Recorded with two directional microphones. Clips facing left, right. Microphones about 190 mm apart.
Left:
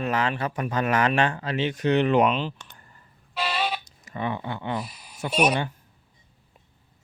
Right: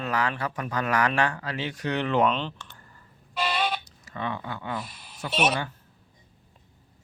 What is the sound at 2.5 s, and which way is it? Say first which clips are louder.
Clicking: right 1 dB; 20° left (ahead or behind).